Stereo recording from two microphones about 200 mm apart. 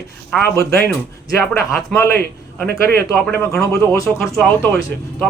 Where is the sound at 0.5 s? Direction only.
15° left (ahead or behind).